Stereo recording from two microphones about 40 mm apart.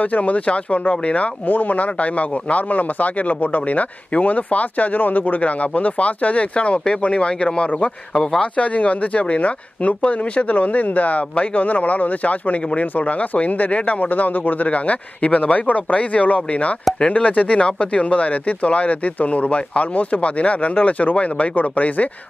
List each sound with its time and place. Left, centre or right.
0.0 s speech: left
8.1 s speech: centre
8.5 s speech: left